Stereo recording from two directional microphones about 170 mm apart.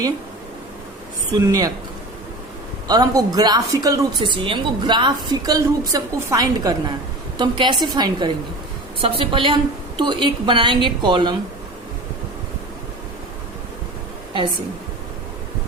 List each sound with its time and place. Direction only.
1.3 s a woman's voice: 20° right (ahead or behind)
2.8 s a woman's voice: 20° right (ahead or behind)